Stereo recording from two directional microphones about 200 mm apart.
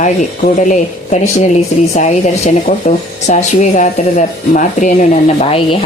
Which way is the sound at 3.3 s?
35° left (ahead or behind).